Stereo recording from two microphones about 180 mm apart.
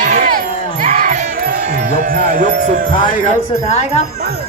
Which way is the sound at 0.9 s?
45° right (ahead or behind).